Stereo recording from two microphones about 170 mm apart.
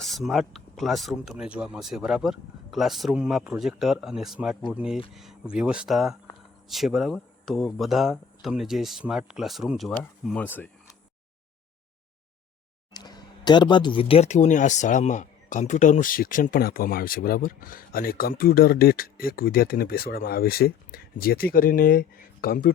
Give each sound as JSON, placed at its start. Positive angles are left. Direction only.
{"t": 0.0, "sound": "speech", "side_deg": 0}
{"t": 12.9, "sound": "speech", "side_deg": 25}